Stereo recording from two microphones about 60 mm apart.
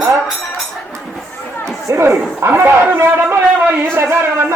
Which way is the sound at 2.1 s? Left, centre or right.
Right.